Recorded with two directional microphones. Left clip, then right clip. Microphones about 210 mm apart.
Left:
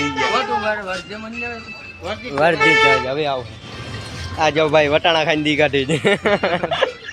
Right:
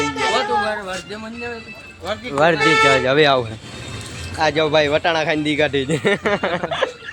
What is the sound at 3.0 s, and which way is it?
Speech, 35° right (ahead or behind).